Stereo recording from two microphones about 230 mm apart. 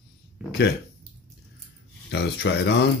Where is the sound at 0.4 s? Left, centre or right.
Centre.